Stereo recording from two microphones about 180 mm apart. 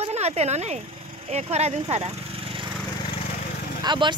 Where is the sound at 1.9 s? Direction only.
35° right (ahead or behind).